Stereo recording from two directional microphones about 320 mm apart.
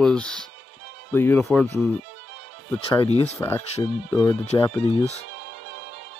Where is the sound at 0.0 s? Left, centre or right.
Centre.